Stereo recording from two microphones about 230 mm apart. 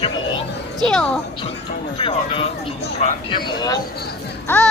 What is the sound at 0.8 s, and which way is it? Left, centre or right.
Speech, centre.